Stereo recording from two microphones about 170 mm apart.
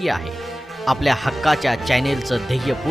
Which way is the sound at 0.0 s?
Centre (ahead or behind).